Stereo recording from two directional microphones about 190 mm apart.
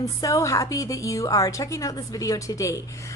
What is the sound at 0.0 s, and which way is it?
A woman's voice, 15° left (ahead or behind).